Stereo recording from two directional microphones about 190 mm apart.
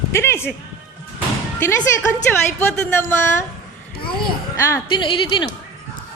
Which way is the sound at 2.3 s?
10° left (ahead or behind).